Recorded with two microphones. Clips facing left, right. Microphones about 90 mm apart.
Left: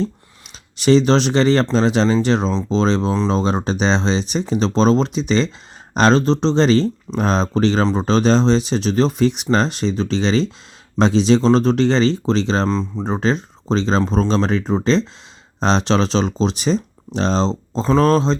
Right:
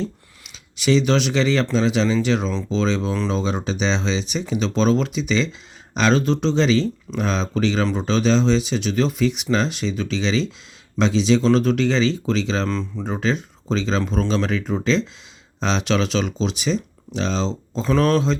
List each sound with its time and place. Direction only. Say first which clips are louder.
0.0 s speech: left 5 dB; 40° left (ahead or behind)